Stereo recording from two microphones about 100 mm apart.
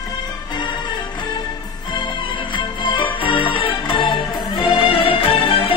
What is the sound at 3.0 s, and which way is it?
Music, 55° left (ahead or behind).